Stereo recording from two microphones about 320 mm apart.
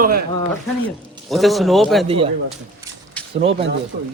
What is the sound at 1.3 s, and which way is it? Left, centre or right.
Speech, centre.